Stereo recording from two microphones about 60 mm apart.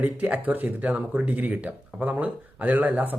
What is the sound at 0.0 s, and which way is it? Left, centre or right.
Speech, right.